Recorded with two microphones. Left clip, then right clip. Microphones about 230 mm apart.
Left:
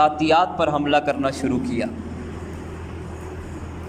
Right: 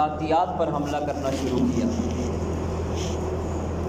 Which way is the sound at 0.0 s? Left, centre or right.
Left.